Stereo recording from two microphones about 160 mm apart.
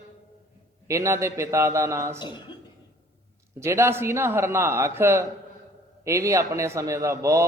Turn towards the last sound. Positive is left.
turn(degrees=-20)  # may be behind; listen again after turning